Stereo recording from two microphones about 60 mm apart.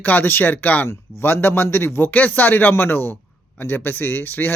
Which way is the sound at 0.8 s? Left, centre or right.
Left.